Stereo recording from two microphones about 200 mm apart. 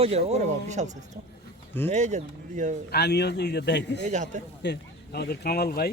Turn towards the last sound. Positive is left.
turn(degrees=50)  # may be behind; listen again after turning